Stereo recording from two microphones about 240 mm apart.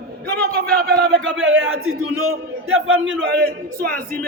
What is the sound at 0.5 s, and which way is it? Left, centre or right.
A man's voice, right.